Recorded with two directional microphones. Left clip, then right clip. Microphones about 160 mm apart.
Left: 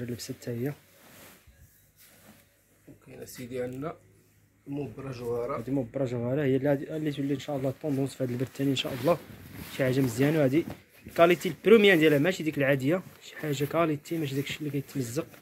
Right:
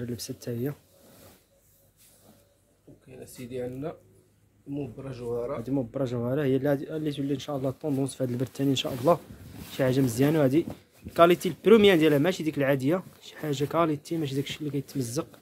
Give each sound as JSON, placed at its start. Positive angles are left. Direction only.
{"t": 3.3, "sound": "speech", "side_deg": -15}